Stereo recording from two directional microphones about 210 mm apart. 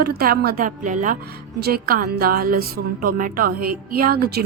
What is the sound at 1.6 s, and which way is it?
A woman's voice, 50° right (ahead or behind).